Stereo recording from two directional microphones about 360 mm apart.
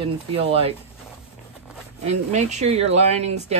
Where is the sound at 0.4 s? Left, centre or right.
Centre.